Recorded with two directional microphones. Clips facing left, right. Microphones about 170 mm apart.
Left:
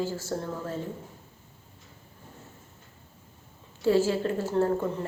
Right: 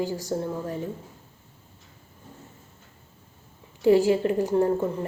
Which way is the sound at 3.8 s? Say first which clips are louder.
Right 5 dB; 15° right (ahead or behind).